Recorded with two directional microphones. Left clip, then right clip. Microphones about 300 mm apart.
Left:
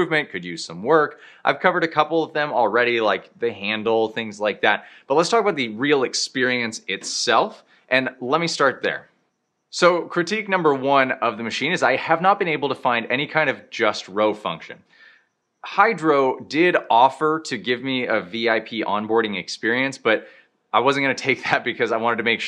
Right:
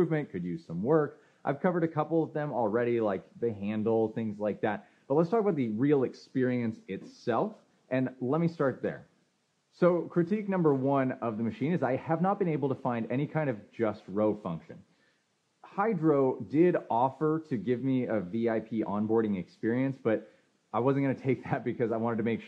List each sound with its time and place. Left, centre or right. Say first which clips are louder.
0.0 s speech: left 9 dB; centre
2.0 s speech: left 8 dB; left
2.5 s speech: left 10 dB; centre